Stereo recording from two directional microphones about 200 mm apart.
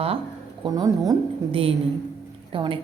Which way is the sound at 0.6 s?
20° right (ahead or behind).